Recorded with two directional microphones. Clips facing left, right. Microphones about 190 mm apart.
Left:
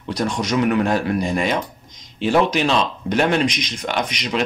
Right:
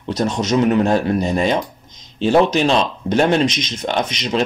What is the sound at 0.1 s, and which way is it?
Speech, 25° right (ahead or behind).